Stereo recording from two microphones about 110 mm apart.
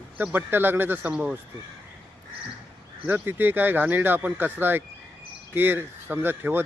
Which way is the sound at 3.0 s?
15° right (ahead or behind).